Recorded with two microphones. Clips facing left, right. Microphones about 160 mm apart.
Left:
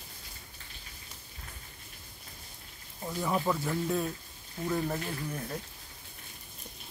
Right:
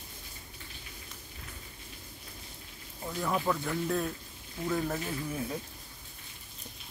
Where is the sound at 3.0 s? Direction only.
5° left (ahead or behind).